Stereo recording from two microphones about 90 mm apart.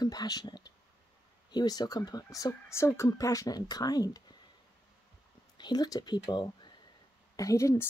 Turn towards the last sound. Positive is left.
turn(degrees=40)  # may be behind; listen again after turning